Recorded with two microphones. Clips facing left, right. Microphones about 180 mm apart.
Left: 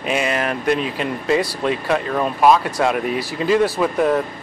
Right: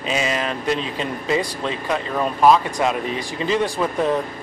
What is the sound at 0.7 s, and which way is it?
Speech, 10° left (ahead or behind).